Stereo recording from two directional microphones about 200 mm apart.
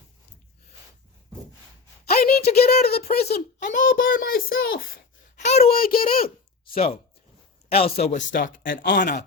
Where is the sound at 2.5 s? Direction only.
50° left (ahead or behind).